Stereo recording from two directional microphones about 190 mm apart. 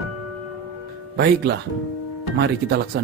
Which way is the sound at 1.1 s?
60° right (ahead or behind).